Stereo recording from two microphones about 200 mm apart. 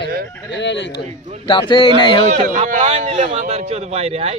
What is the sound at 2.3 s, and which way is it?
A man's voice, 40° right (ahead or behind).